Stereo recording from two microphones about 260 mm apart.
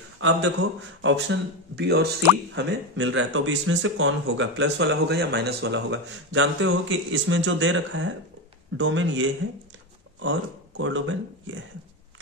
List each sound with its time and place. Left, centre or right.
0.2 s speech: right